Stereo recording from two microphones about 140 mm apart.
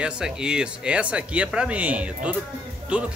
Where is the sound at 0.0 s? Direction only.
5° right (ahead or behind).